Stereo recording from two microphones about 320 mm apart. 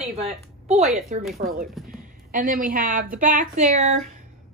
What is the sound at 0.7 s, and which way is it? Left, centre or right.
Speech, centre.